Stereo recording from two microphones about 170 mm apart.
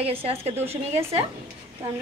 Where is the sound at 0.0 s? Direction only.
35° right (ahead or behind).